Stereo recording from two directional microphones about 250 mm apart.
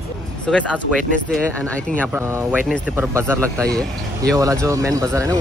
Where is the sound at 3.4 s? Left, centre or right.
Centre.